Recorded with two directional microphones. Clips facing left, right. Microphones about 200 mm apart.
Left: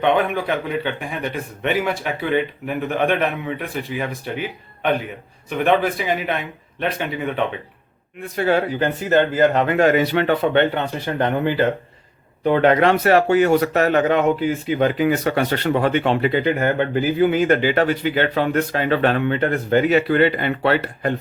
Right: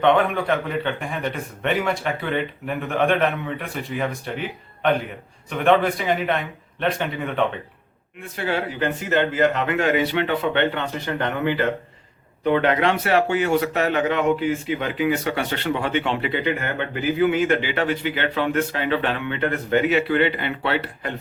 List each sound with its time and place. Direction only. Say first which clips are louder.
0.0 s a man's voice: even; 5° left (ahead or behind)
8.4 s speech: left 6 dB; 40° left (ahead or behind)
12.5 s speech: left 4 dB; 40° left (ahead or behind)